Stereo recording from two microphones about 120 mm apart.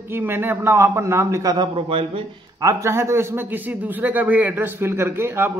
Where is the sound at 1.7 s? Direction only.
50° right (ahead or behind).